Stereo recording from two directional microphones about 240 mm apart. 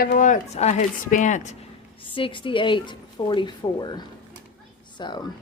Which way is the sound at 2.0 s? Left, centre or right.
Left.